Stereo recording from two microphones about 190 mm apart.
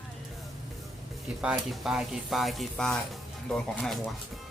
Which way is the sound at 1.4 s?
5° right (ahead or behind).